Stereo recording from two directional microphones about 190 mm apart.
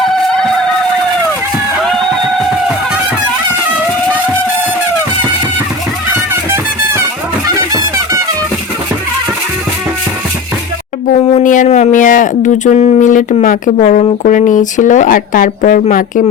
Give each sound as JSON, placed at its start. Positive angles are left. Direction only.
{"t": 7.4, "sound": "music", "side_deg": -20}
{"t": 11.1, "sound": "a sound", "side_deg": 45}
{"t": 14.3, "sound": "speech", "side_deg": 40}